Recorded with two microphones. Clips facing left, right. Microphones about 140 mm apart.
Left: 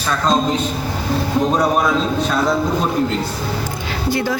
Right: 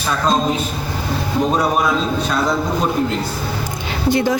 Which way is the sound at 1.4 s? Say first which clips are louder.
Even; centre (ahead or behind).